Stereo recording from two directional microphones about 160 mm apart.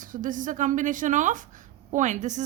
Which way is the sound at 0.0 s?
55° right (ahead or behind).